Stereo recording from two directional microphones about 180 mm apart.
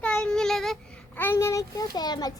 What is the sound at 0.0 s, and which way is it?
A child's voice, 5° left (ahead or behind).